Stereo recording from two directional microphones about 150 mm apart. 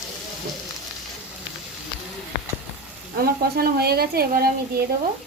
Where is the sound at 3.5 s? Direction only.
90° right.